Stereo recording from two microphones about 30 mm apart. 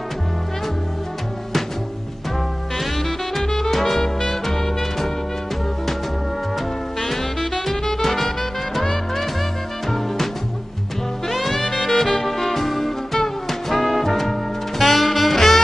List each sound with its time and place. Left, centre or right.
2.8 s music: centre
3.4 s music: centre
7.0 s music: centre
11.2 s music: centre